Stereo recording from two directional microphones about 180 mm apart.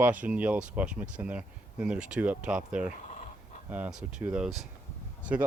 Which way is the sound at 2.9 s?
40° left (ahead or behind).